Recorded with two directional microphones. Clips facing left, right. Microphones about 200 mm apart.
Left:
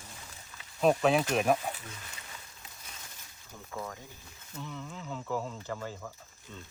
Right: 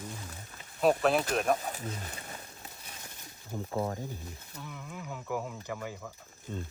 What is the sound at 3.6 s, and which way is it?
Speech, 35° right (ahead or behind).